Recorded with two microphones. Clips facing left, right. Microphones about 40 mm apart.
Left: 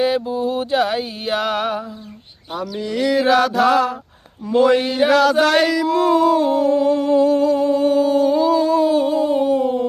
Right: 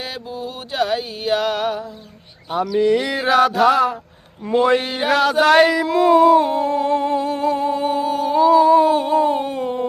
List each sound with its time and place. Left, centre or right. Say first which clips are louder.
0.0 s music: left 10 dB; centre
2.8 s mantra: even; right
3.2 s a sound: left 2 dB; centre
6.7 s humming: left 3 dB; right